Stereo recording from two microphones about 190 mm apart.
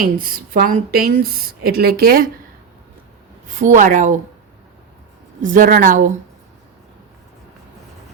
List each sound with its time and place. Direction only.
0.0 s a woman's voice: 50° right (ahead or behind)
3.5 s a woman's voice: 40° right (ahead or behind)
5.4 s a woman's voice: 45° right (ahead or behind)